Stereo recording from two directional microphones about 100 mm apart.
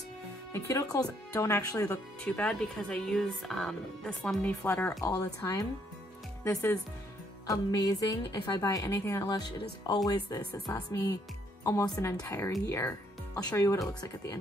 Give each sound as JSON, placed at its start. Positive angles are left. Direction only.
{"t": 0.5, "sound": "a woman's voice", "side_deg": 30}
{"t": 2.2, "sound": "speech", "side_deg": 15}
{"t": 4.6, "sound": "speech", "side_deg": 20}
{"t": 5.0, "sound": "a woman's voice", "side_deg": 35}
{"t": 7.4, "sound": "a woman's voice", "side_deg": 40}
{"t": 9.3, "sound": "a woman's voice", "side_deg": 40}